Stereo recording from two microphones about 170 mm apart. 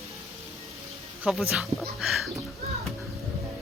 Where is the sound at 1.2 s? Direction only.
Centre (ahead or behind).